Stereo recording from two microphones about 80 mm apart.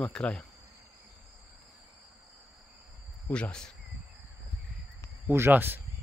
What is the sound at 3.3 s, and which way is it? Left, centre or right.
Speech, centre.